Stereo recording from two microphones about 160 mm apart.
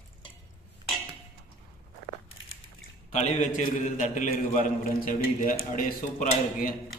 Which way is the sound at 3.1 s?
45° left (ahead or behind).